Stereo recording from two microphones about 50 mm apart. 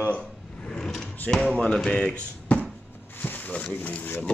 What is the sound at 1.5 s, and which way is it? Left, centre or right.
Speech, centre.